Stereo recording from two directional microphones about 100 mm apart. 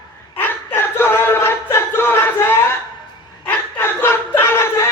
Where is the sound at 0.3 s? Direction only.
20° left (ahead or behind).